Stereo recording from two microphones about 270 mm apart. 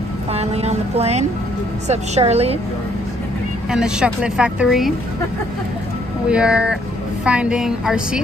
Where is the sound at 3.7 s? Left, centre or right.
Centre.